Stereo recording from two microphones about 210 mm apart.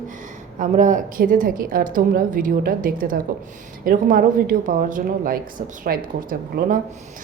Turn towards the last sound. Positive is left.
turn(degrees=-40)  # may be behind; listen again after turning